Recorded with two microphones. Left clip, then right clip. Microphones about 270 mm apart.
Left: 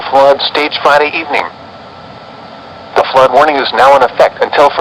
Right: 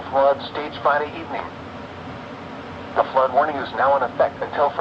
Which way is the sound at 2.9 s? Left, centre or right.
Left.